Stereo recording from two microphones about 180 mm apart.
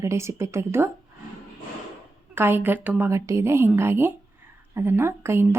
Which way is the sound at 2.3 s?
10° right (ahead or behind).